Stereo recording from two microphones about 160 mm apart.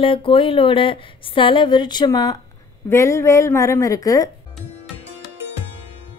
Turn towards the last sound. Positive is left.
turn(degrees=20)  # may be behind; listen again after turning